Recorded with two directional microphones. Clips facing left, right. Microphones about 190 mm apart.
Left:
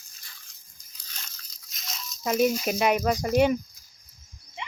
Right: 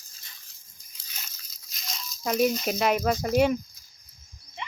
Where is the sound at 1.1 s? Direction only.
5° right (ahead or behind).